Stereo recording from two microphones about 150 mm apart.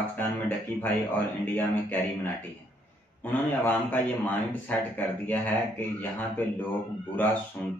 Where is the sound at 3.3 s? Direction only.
10° left (ahead or behind).